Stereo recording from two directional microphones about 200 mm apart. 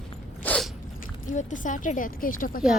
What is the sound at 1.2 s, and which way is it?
Speech, 40° left (ahead or behind).